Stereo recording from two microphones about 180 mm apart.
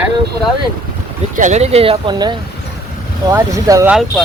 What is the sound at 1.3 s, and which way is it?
Speech, 40° right (ahead or behind).